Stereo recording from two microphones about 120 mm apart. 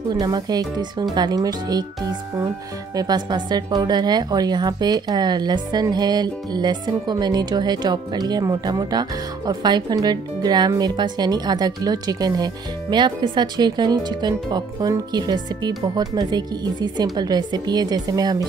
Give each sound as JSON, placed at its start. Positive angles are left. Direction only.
{"t": 0.1, "sound": "a woman's voice", "side_deg": -35}